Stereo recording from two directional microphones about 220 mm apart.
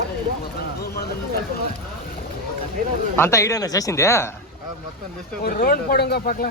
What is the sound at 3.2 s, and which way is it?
Speech, 15° left (ahead or behind).